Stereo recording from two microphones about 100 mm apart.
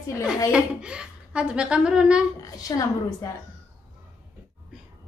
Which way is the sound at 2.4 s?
35° left (ahead or behind).